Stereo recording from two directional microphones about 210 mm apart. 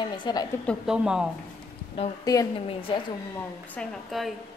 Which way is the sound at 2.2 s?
15° left (ahead or behind).